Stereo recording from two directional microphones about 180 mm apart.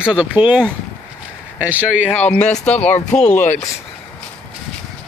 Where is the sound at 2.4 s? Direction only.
40° left (ahead or behind).